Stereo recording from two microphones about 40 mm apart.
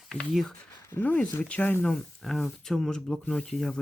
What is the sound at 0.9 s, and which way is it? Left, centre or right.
Speech, left.